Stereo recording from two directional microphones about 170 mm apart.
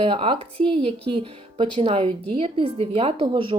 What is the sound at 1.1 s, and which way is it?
A woman's voice, 30° right (ahead or behind).